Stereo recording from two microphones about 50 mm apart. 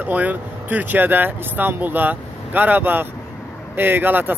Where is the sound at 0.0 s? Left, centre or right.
Right.